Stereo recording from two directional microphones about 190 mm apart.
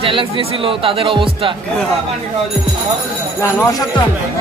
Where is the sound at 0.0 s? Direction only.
25° right (ahead or behind).